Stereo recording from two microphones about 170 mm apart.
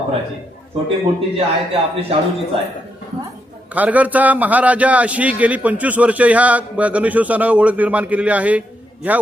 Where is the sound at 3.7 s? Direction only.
10° right (ahead or behind).